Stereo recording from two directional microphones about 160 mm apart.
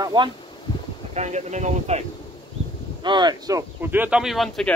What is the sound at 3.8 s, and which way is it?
Speech, 10° right (ahead or behind).